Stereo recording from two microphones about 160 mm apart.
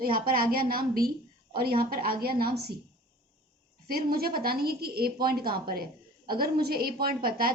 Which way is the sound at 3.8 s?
70° right (ahead or behind).